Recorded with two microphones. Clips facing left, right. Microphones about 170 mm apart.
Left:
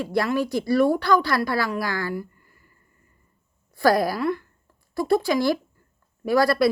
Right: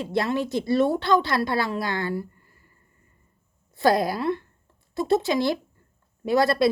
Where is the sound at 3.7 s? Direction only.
20° right (ahead or behind).